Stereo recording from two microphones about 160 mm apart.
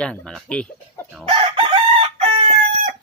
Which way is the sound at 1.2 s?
35° right (ahead or behind).